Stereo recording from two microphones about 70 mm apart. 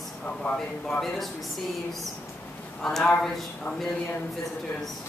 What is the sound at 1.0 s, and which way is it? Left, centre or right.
Speech, centre.